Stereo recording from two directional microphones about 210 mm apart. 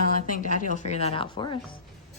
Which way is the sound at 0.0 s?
40° left (ahead or behind).